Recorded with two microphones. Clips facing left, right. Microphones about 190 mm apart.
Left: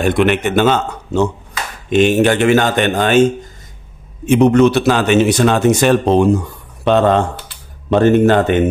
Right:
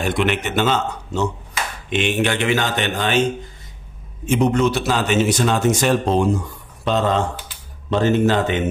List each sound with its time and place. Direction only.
0.0 s speech: 55° left (ahead or behind)
1.9 s speech: 40° left (ahead or behind)
4.3 s a man's voice: 65° left (ahead or behind)